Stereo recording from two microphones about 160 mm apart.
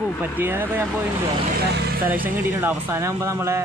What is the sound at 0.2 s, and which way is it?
Speech, 10° right (ahead or behind).